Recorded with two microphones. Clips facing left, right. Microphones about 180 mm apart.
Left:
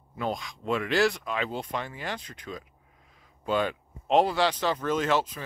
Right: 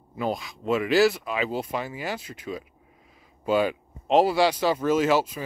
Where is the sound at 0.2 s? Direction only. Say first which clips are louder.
Right 3 dB; 5° right (ahead or behind).